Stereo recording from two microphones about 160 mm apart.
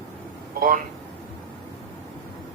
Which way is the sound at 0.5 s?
60° right (ahead or behind).